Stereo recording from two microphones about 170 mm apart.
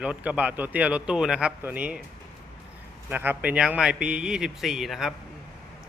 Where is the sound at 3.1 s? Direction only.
10° right (ahead or behind).